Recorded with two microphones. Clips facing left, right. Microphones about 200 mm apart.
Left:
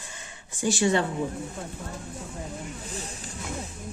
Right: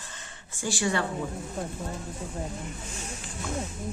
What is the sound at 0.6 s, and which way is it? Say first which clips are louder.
Speech: left 5 dB; 20° left (ahead or behind).